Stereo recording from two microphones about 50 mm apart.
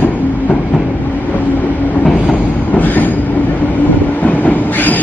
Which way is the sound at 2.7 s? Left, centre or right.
Left.